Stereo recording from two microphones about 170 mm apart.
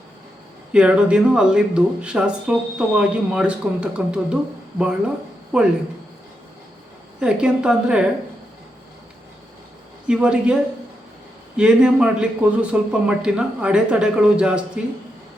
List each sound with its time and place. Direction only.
0.7 s speech: 5° right (ahead or behind)
7.2 s speech: 5° right (ahead or behind)
10.1 s a woman's voice: 5° right (ahead or behind)